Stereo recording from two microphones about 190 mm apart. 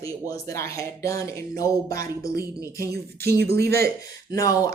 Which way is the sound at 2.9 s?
55° right (ahead or behind).